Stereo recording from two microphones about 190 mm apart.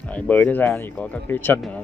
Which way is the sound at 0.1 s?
10° left (ahead or behind).